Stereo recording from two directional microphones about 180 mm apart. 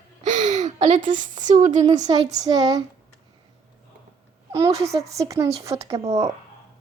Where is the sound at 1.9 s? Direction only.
20° right (ahead or behind).